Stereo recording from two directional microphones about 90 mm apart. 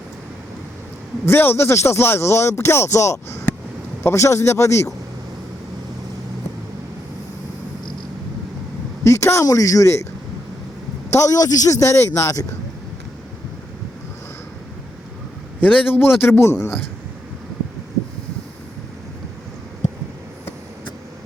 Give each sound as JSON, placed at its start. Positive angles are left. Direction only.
{"t": 1.2, "sound": "a man's voice", "side_deg": 25}
{"t": 9.0, "sound": "a man's voice", "side_deg": 35}
{"t": 11.1, "sound": "a man's voice", "side_deg": 40}
{"t": 15.6, "sound": "speech", "side_deg": 20}
{"t": 16.4, "sound": "a man's voice", "side_deg": 30}